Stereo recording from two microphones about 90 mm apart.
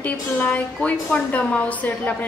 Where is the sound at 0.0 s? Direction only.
15° left (ahead or behind).